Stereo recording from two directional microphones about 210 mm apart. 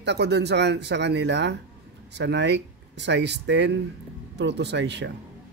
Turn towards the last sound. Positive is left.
turn(degrees=-55)  # may be behind; listen again after turning